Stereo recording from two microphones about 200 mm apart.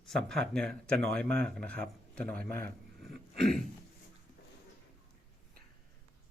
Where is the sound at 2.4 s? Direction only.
45° right (ahead or behind).